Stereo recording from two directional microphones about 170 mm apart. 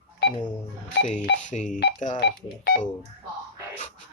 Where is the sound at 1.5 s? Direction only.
45° left (ahead or behind).